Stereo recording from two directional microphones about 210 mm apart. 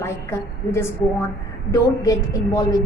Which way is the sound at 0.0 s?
10° left (ahead or behind).